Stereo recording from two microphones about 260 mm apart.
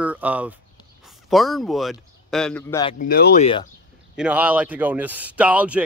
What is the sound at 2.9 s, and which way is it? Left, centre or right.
Speech, left.